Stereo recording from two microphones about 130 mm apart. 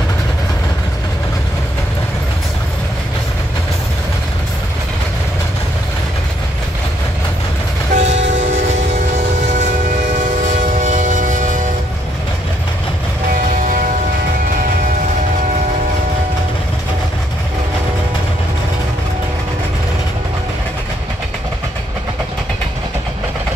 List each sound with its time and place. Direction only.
7.9 s train: 60° right (ahead or behind)
10.1 s train: 70° right (ahead or behind)